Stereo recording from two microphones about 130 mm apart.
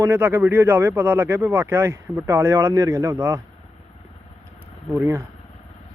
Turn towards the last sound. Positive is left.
turn(degrees=-20)  # may be behind; listen again after turning